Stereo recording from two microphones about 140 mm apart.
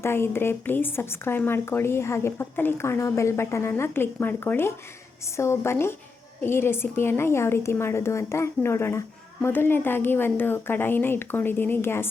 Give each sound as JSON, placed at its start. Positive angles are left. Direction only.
{"t": 0.0, "sound": "a woman's voice", "side_deg": 15}